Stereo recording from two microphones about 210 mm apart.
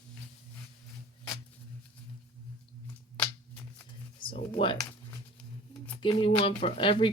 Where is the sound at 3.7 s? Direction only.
25° left (ahead or behind).